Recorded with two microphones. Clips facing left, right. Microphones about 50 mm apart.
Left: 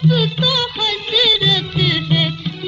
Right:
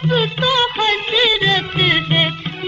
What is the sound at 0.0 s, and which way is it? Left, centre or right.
Music of bollywood, right.